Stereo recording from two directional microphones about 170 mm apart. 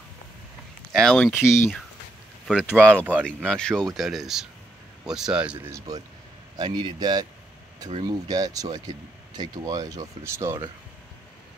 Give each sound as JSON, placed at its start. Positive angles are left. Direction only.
{"t": 0.9, "sound": "speech", "side_deg": 5}
{"t": 1.4, "sound": "speech", "side_deg": 15}
{"t": 2.4, "sound": "speech", "side_deg": -5}
{"t": 2.8, "sound": "speech", "side_deg": 5}
{"t": 5.7, "sound": "speech", "side_deg": -20}